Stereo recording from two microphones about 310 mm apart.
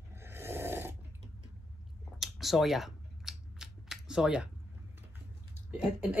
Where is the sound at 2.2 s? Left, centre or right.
Centre.